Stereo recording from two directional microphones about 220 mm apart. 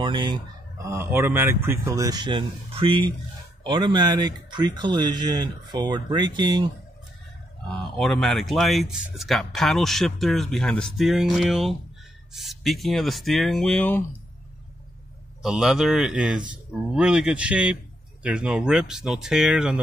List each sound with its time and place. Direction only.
0.0 s speech: 20° right (ahead or behind)
7.6 s a man's voice: centre (ahead or behind)
15.4 s a man's voice: centre (ahead or behind)